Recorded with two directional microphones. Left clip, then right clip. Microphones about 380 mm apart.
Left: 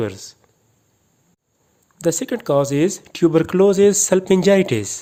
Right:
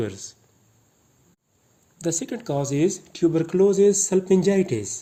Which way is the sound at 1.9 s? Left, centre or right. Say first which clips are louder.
Left 7 dB; centre.